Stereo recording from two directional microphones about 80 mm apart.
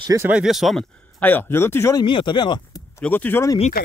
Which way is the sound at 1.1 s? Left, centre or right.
Left.